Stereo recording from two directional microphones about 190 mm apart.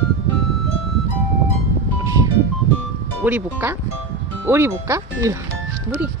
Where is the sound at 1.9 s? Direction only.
15° right (ahead or behind).